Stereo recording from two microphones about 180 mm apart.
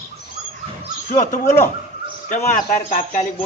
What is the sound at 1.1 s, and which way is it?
A man's voice, 45° left (ahead or behind).